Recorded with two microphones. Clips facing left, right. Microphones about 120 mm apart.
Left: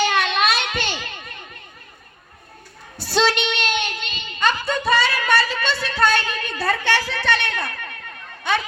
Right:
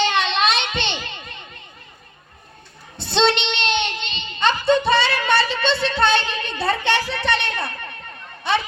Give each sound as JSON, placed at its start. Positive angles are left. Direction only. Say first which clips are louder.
{"t": 0.0, "sound": "a sound", "louder": "even", "side_deg": -25}
{"t": 0.3, "sound": "children playing", "louder": "even", "side_deg": -25}
{"t": 3.0, "sound": "child singing", "louder": "right 1 dB", "side_deg": -25}